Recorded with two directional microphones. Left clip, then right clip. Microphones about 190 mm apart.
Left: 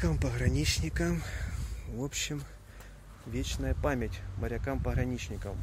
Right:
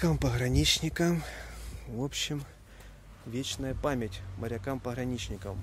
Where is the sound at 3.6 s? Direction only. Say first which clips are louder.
Left 1 dB; 20° right (ahead or behind).